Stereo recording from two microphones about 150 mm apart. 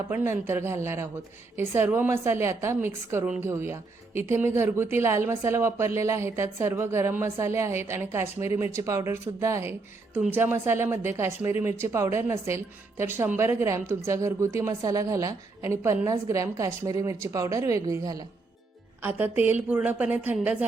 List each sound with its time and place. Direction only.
0.1 s a woman's voice: 15° right (ahead or behind)
19.0 s speech: 10° right (ahead or behind)